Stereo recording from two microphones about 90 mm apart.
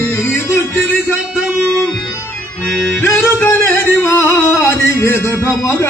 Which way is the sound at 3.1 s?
30° left (ahead or behind).